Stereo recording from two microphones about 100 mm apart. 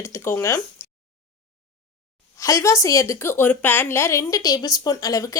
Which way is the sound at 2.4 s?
30° left (ahead or behind).